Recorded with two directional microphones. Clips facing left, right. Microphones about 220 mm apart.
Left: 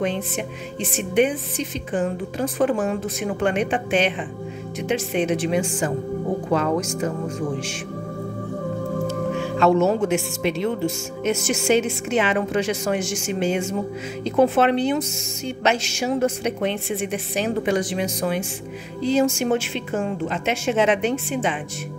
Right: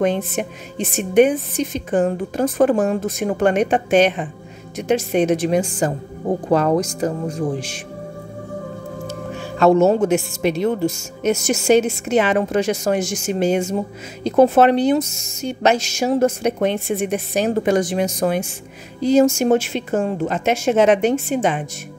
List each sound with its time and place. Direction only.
0.0 s a woman's voice: 45° right (ahead or behind)
9.6 s a woman's voice: 40° right (ahead or behind)